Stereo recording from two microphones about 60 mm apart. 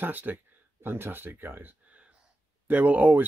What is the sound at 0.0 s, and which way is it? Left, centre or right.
A man's voice, right.